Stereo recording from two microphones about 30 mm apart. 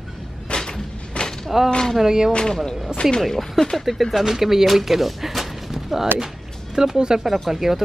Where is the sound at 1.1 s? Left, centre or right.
Left.